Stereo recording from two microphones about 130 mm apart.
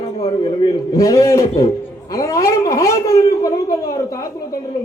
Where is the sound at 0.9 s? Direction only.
25° left (ahead or behind).